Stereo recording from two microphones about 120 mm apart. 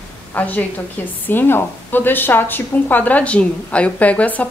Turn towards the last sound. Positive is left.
turn(degrees=10)  # may be behind; listen again after turning